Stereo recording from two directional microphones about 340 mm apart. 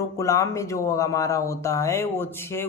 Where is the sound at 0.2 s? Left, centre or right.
Centre.